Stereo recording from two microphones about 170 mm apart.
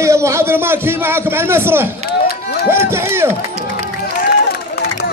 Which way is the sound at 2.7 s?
15° right (ahead or behind).